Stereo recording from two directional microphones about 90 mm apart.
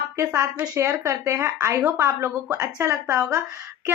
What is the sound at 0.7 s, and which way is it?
A woman's voice, 35° right (ahead or behind).